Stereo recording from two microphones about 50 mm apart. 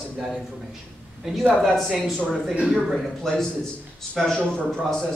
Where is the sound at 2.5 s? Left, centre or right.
Centre.